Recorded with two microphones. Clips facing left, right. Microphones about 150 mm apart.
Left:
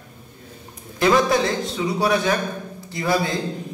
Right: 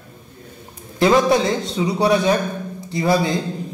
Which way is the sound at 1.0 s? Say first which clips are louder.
Right 3 dB; 25° right (ahead or behind).